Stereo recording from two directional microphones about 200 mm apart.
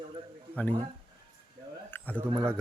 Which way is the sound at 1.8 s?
10° left (ahead or behind).